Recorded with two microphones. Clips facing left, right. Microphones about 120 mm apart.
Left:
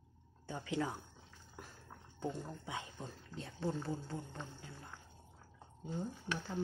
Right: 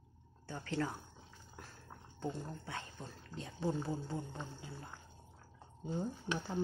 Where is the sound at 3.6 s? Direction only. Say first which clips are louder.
Right 2 dB; 10° right (ahead or behind).